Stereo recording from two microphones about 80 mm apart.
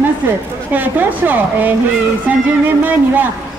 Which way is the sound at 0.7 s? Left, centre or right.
Right.